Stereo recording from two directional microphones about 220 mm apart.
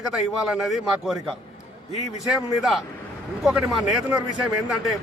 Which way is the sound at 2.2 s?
Centre (ahead or behind).